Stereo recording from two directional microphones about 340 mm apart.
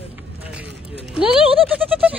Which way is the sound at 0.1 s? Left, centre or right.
Centre.